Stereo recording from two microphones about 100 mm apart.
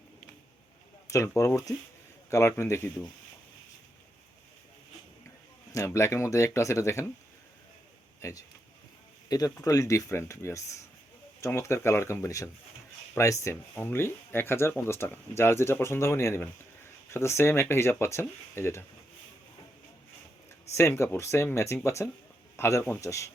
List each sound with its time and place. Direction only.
1.0 s speech: 30° left (ahead or behind)
5.7 s speech: 30° left (ahead or behind)
8.2 s speech: 30° left (ahead or behind)
20.7 s speech: 25° left (ahead or behind)